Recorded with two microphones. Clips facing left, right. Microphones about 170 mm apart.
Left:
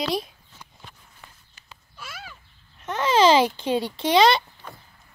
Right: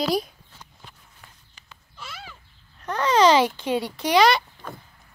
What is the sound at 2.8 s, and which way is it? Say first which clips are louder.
Babbling: even; 25° left (ahead or behind).